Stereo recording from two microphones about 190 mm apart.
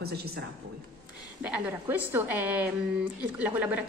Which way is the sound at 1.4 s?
5° right (ahead or behind).